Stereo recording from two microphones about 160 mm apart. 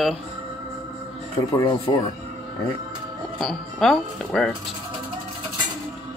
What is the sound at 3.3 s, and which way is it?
Speech, centre (ahead or behind).